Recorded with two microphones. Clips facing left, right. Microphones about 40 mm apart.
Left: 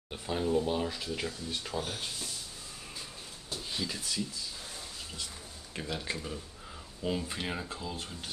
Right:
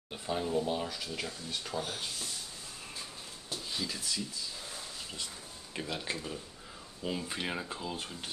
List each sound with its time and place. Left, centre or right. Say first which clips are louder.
0.1 s speech: left 2 dB; centre
0.8 s speech: left 3 dB; centre
3.7 s speech: left 1 dB; centre
5.8 s speech: even; centre